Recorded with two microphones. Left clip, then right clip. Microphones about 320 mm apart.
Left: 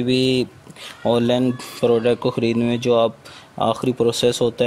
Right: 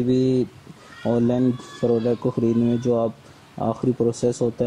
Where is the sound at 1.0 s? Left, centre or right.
Left.